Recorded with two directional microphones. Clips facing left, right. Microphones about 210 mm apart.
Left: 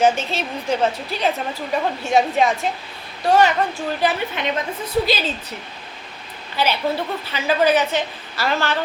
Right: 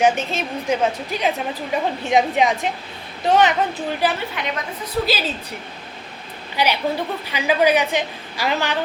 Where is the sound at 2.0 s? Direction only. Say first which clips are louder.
Even; 15° right (ahead or behind).